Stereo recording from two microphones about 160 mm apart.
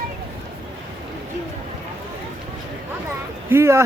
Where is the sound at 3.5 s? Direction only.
15° right (ahead or behind).